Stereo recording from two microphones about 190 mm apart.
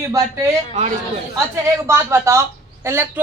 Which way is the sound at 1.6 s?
15° right (ahead or behind).